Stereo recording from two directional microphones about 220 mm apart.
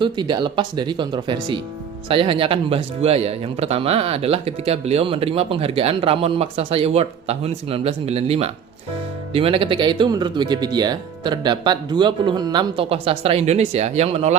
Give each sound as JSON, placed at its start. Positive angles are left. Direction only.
{"t": 0.0, "sound": "a man's voice", "side_deg": -20}